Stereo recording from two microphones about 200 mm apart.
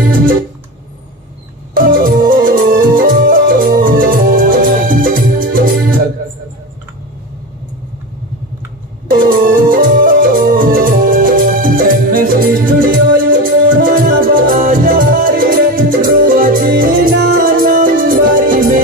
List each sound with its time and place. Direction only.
1.7 s music: 45° right (ahead or behind)
9.1 s music: 45° right (ahead or behind)